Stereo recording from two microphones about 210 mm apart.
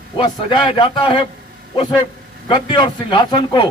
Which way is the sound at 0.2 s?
25° left (ahead or behind).